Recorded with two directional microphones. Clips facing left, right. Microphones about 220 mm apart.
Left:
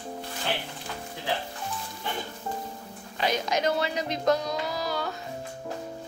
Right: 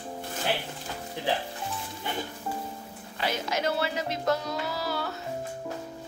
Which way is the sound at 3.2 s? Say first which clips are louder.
Left 3 dB; 15° left (ahead or behind).